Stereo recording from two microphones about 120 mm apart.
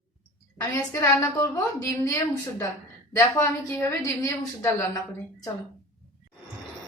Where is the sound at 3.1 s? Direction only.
25° left (ahead or behind).